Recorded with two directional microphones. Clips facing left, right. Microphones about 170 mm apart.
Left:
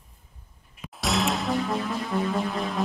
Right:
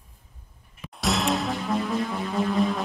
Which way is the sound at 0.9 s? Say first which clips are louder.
Right 1 dB; centre (ahead or behind).